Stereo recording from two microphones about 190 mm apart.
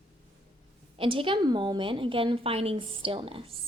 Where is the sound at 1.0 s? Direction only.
25° right (ahead or behind).